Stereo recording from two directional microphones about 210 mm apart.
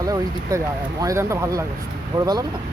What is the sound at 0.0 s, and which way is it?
Speech, 15° right (ahead or behind).